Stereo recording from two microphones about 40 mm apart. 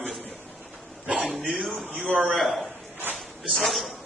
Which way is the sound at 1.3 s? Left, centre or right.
Centre.